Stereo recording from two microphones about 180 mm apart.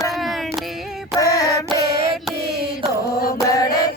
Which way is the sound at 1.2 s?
20° left (ahead or behind).